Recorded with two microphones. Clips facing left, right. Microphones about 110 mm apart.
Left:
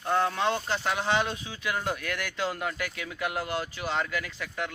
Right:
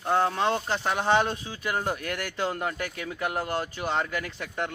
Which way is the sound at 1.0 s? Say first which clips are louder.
Right 4 dB; 45° right (ahead or behind).